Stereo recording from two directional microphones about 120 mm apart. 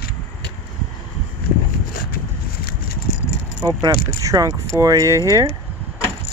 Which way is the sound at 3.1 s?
90° left.